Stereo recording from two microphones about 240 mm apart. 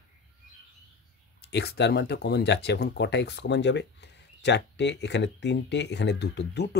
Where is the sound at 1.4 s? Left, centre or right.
Left.